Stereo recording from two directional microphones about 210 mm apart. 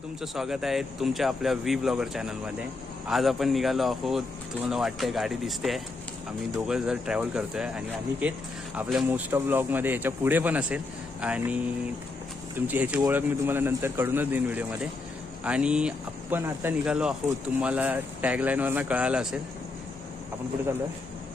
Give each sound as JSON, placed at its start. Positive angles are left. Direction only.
{"t": 0.2, "sound": "speech", "side_deg": 0}
{"t": 12.5, "sound": "speech", "side_deg": -10}